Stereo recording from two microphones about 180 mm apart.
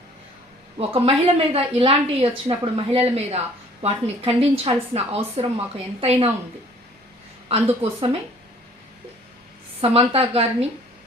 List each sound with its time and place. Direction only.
0.8 s a woman's voice: 30° right (ahead or behind)
7.4 s a woman's voice: 30° right (ahead or behind)
9.8 s a woman's voice: 30° right (ahead or behind)